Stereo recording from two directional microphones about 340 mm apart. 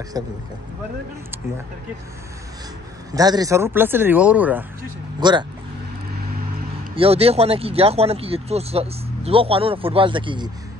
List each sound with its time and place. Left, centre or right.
0.2 s speech: centre
3.1 s speech: centre
7.0 s speech: centre